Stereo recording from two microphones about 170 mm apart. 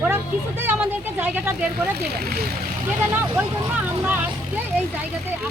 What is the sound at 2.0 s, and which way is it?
Speech, 70° right (ahead or behind).